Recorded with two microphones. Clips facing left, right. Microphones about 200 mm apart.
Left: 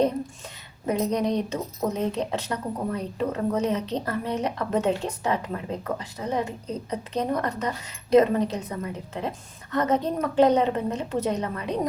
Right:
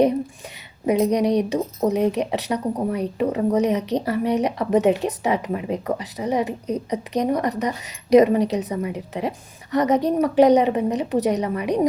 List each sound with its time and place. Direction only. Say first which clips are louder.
0.9 s speech: right 6 dB; 15° right (ahead or behind)